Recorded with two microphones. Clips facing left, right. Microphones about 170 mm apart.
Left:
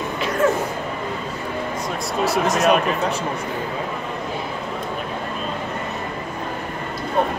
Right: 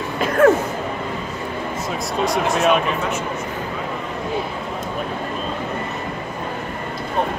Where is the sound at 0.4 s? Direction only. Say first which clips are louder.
Right 6 dB; 60° right (ahead or behind).